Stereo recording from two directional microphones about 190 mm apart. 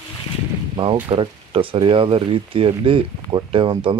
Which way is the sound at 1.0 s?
30° right (ahead or behind).